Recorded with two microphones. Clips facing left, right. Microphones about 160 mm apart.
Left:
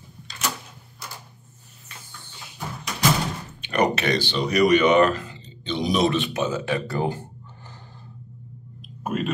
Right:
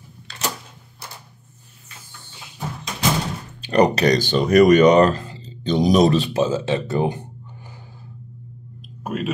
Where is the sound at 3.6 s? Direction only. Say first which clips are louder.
Right 6 dB; 35° right (ahead or behind); by 7.8 s 10° right (ahead or behind).